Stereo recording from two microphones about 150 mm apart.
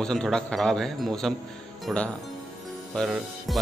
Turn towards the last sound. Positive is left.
turn(degrees=0)  # may be behind; listen again after turning